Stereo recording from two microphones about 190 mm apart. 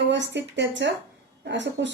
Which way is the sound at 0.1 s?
70° right (ahead or behind).